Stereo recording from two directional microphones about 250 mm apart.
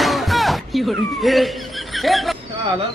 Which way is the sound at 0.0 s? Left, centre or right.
Centre.